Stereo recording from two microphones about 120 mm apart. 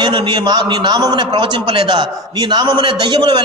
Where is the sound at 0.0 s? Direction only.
40° right (ahead or behind).